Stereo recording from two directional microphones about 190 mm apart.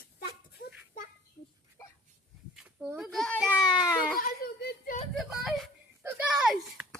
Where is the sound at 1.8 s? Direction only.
15° left (ahead or behind).